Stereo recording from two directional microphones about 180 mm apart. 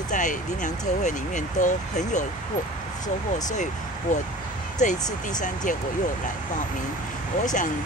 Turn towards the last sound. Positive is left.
turn(degrees=45)  # may be behind; listen again after turning